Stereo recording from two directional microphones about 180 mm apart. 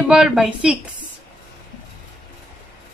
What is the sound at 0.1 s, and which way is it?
Speech, 5° right (ahead or behind).